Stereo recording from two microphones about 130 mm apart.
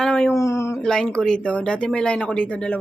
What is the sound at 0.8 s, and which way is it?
Speech, 5° left (ahead or behind).